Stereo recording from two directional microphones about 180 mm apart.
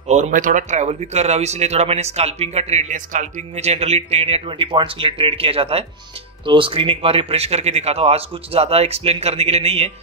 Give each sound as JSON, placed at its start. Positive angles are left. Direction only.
{"t": 0.1, "sound": "speech", "side_deg": -45}